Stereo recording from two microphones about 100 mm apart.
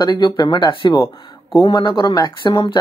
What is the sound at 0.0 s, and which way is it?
Speech, 45° left (ahead or behind).